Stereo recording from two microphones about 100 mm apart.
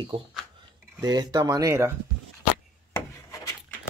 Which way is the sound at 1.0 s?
40° right (ahead or behind).